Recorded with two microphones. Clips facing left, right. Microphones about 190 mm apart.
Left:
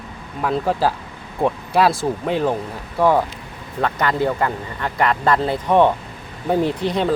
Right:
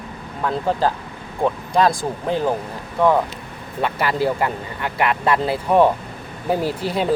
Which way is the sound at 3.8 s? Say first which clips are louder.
Left 1 dB; 10° right (ahead or behind).